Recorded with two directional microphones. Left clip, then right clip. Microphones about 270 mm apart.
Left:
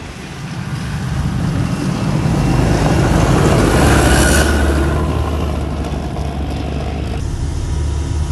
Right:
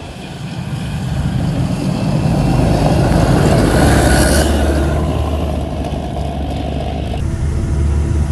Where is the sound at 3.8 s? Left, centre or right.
Left.